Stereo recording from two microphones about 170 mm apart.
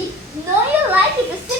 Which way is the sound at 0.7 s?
10° right (ahead or behind).